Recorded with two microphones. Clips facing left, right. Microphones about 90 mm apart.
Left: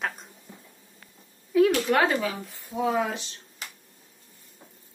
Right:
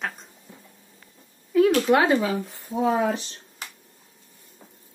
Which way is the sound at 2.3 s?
35° right (ahead or behind).